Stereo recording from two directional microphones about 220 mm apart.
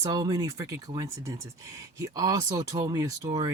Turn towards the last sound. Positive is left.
turn(degrees=-15)  # may be behind; listen again after turning